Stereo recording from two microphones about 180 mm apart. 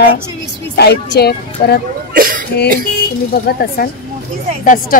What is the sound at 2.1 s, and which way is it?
Cough, 50° right (ahead or behind).